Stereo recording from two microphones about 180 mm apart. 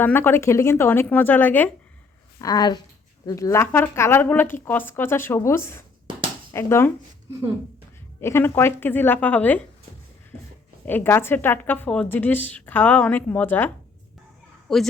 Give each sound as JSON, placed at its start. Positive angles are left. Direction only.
{"t": 0.0, "sound": "a woman's voice", "side_deg": 10}
{"t": 2.4, "sound": "a woman's voice", "side_deg": 20}
{"t": 8.2, "sound": "a woman's voice", "side_deg": 15}
{"t": 10.8, "sound": "a woman's voice", "side_deg": 10}
{"t": 14.7, "sound": "a woman's voice", "side_deg": 0}